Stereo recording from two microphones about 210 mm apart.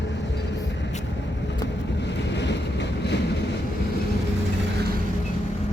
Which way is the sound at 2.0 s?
55° left (ahead or behind).